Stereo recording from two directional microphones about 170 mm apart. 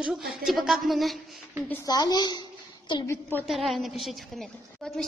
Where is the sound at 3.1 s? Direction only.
10° left (ahead or behind).